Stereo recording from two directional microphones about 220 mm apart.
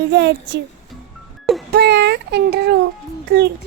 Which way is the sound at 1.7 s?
50° right (ahead or behind).